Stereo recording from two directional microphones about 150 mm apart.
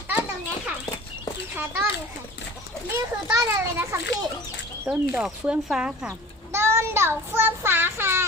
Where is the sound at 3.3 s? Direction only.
20° right (ahead or behind).